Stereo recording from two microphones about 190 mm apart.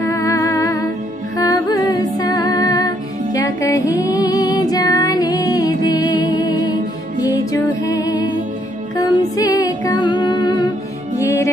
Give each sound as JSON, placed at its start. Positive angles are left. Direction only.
{"t": 0.0, "sound": "humming", "side_deg": 15}
{"t": 1.3, "sound": "music", "side_deg": 20}